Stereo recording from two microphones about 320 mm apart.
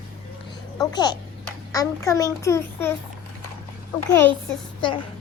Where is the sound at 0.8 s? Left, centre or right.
Centre.